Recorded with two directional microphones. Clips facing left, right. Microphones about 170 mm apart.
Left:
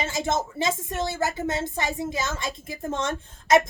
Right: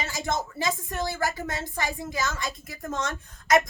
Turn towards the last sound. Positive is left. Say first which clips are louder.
# left 2 dB
turn(degrees=25)  # may be behind; listen again after turning